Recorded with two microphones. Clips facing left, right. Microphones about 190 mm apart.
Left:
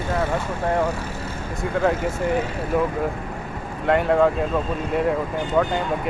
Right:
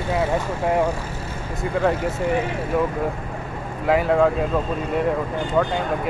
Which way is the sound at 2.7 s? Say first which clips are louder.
Left 1 dB; centre (ahead or behind).